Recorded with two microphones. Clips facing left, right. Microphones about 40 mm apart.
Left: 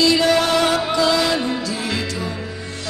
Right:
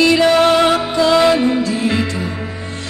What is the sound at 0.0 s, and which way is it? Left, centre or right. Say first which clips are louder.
Music: right 5 dB; right.